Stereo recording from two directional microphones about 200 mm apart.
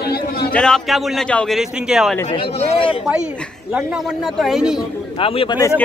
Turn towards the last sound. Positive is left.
turn(degrees=15)  # may be behind; listen again after turning